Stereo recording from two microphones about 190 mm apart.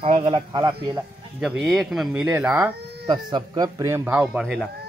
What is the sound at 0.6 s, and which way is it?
Speech, 15° right (ahead or behind).